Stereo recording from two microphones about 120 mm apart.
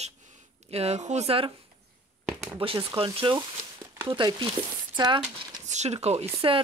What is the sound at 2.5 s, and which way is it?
Speech, 50° right (ahead or behind).